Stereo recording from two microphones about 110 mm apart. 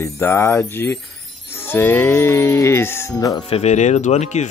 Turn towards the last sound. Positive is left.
turn(degrees=90)